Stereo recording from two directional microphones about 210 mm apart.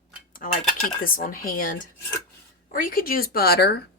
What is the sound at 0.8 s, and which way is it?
A woman's voice, 45° left (ahead or behind).